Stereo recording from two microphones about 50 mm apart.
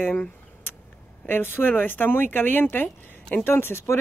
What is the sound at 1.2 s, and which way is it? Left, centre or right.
Speech, left.